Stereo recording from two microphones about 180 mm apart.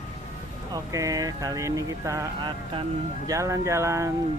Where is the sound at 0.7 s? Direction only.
20° right (ahead or behind).